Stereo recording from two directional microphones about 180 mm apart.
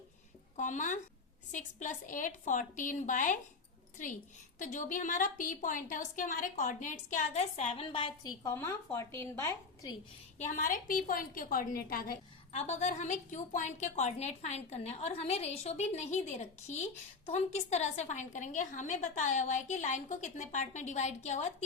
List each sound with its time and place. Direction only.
0.5 s a woman's voice: 45° left (ahead or behind)
4.6 s a woman's voice: 45° left (ahead or behind); by 10.0 s 15° left (ahead or behind)
10.3 s a woman's voice: 40° left (ahead or behind)
12.5 s a woman's voice: 40° left (ahead or behind)